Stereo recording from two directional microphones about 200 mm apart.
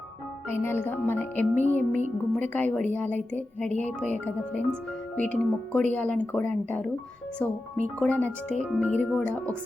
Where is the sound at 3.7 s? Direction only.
35° right (ahead or behind).